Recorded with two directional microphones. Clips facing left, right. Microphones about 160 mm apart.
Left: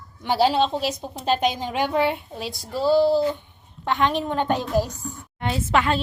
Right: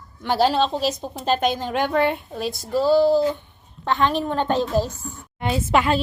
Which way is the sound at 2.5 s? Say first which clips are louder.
Right 7 dB; 45° right (ahead or behind).